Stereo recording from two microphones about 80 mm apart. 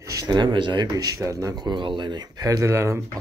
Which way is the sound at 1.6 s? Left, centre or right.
Right.